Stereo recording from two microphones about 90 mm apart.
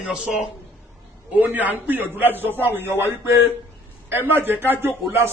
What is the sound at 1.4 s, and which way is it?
A man's voice, 20° right (ahead or behind).